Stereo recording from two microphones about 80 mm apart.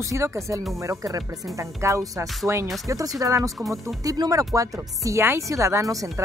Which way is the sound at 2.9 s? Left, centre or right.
Right.